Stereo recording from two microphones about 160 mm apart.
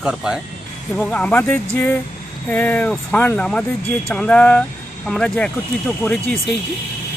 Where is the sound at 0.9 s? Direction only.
5° left (ahead or behind).